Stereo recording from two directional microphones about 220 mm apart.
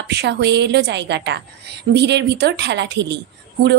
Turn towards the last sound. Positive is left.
turn(degrees=-50)  # may be behind; listen again after turning